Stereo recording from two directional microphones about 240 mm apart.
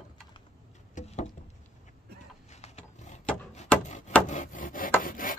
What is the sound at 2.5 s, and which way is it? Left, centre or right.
Mechanisms, left.